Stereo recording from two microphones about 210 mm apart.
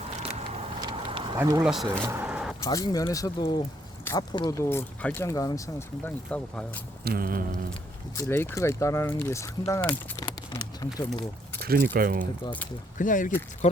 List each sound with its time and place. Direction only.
0.8 s vehicle: 20° right (ahead or behind)
1.4 s speech: 15° right (ahead or behind)
1.6 s speech: centre (ahead or behind)
2.0 s vehicle: 10° right (ahead or behind)
2.6 s speech: 15° left (ahead or behind)
7.0 s a sound: 45° right (ahead or behind)
8.1 s speech: 15° left (ahead or behind)
11.6 s speech: 45° right (ahead or behind)
11.9 s a sound: 45° right (ahead or behind)
13.0 s speech: 40° left (ahead or behind)